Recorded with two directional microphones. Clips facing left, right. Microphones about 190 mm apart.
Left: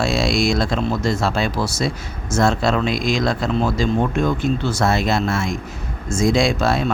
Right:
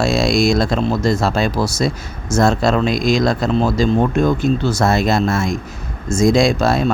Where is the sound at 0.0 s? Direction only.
40° right (ahead or behind).